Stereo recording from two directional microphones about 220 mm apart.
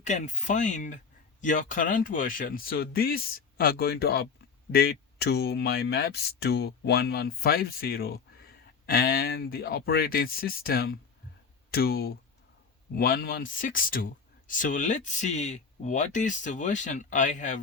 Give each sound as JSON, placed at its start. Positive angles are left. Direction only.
{"t": 0.0, "sound": "speech", "side_deg": 35}